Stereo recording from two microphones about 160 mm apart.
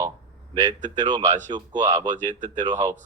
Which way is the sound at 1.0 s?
30° right (ahead or behind).